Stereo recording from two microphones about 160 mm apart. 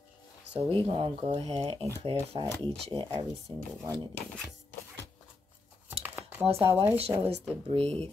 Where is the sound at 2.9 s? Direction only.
25° right (ahead or behind).